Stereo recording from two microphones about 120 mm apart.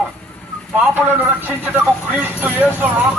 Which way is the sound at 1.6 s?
15° right (ahead or behind).